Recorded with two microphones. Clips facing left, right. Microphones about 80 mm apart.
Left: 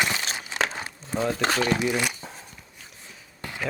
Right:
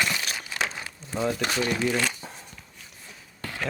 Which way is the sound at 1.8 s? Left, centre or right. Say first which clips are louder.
Even; centre.